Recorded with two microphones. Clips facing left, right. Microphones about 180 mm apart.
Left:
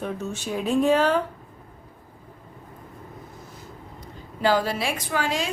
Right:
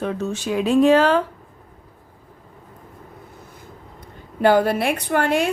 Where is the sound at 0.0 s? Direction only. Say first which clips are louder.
Right 5 dB; 90° right.